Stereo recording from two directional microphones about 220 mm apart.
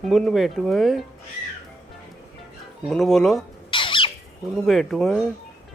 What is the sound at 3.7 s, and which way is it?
Bird, 25° left (ahead or behind).